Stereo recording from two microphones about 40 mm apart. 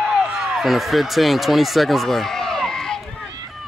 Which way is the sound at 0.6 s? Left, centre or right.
Centre.